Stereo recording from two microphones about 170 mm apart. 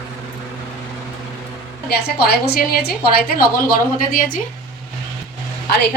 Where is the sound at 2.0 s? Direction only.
65° left (ahead or behind).